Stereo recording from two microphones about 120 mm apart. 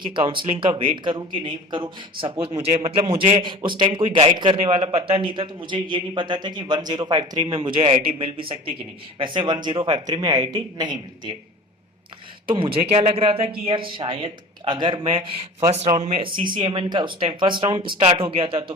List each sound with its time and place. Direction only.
0.0 s a man's voice: 40° right (ahead or behind)
12.5 s a man's voice: 45° right (ahead or behind)
12.9 s a man's voice: 60° right (ahead or behind)
16.2 s a man's voice: 40° right (ahead or behind)